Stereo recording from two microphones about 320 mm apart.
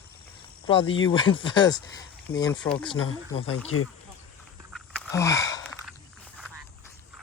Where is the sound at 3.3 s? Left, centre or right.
Left.